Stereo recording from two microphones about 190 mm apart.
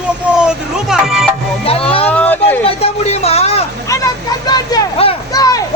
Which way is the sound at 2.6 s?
30° left (ahead or behind).